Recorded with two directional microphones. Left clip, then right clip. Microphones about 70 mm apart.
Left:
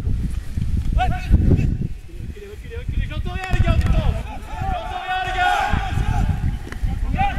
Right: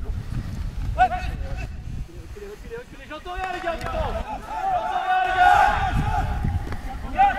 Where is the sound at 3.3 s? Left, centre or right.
Left.